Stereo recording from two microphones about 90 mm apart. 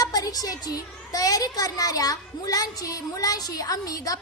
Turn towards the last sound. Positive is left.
turn(degrees=45)  # may be behind; listen again after turning